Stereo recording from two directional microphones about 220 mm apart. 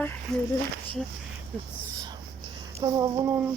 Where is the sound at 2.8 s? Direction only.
15° right (ahead or behind).